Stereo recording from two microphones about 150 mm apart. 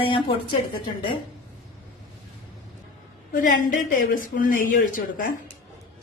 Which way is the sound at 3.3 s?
65° left (ahead or behind).